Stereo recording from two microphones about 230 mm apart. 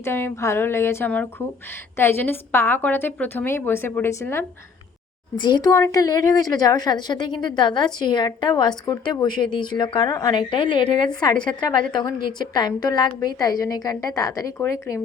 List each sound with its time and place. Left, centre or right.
0.0 s a woman's voice: centre